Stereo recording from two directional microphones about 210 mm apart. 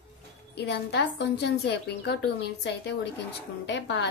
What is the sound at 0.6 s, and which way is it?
A woman's voice, 50° left (ahead or behind).